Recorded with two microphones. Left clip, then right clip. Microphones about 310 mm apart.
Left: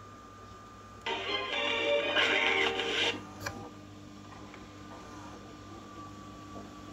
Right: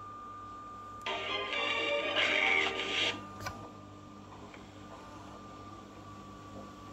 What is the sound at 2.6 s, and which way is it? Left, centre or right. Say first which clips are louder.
Music: left 2 dB; centre.